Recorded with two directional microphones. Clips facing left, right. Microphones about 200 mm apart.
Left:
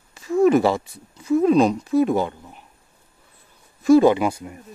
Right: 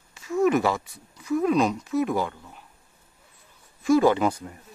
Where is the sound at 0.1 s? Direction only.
30° left (ahead or behind).